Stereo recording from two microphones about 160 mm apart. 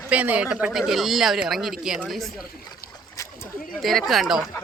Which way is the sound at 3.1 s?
20° left (ahead or behind).